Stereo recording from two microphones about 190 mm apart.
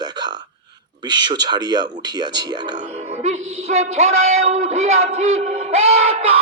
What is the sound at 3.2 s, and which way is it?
A man's voice, 35° right (ahead or behind).